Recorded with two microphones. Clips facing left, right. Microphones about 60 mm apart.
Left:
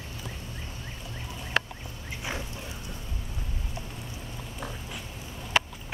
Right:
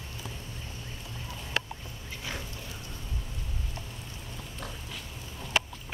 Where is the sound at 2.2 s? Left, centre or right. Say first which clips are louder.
Left 4 dB; centre.